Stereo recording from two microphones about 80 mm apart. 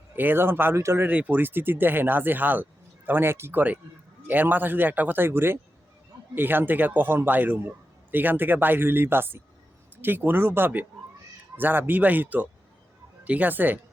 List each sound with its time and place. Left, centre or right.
0.2 s speech: right
1.0 s speech: right